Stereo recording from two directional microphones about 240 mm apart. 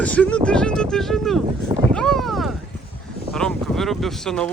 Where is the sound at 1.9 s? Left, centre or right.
Centre.